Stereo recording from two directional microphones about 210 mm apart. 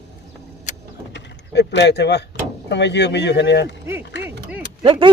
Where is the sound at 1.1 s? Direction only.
55° left (ahead or behind).